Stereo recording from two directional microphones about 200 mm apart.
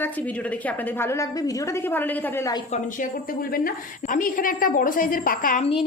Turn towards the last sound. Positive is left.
turn(degrees=45)  # may be behind; listen again after turning